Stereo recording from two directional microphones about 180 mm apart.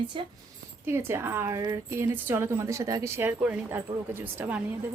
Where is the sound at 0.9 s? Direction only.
15° right (ahead or behind).